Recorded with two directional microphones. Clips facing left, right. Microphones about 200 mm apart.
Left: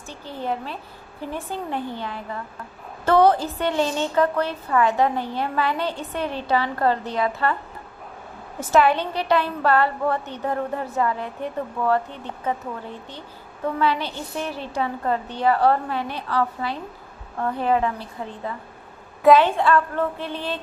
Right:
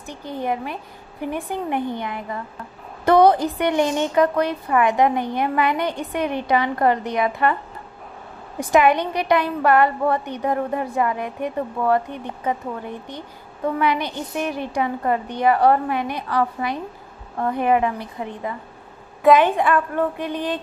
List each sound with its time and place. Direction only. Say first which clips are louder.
0.1 s a woman's voice: right 3 dB; 15° right (ahead or behind)
8.5 s a woman's voice: right 2 dB; 15° right (ahead or behind)